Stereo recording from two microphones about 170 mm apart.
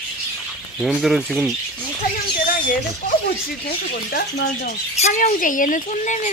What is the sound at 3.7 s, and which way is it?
Speech, 65° left (ahead or behind).